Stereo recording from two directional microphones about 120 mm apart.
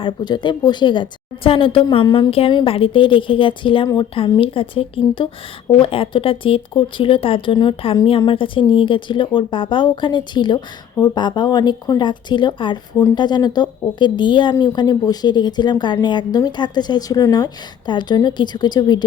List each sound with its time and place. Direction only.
0.0 s a woman's voice: 40° left (ahead or behind)
2.3 s a woman's voice: 55° left (ahead or behind); by 19.0 s 35° left (ahead or behind)